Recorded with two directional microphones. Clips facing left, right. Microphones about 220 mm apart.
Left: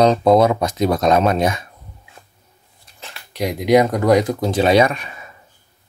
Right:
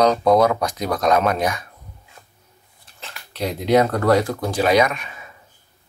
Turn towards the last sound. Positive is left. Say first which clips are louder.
# left 3 dB
turn(degrees=30)  # may be behind; listen again after turning